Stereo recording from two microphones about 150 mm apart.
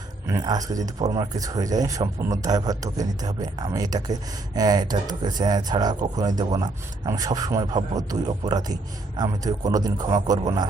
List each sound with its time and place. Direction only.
0.3 s speech: 25° right (ahead or behind)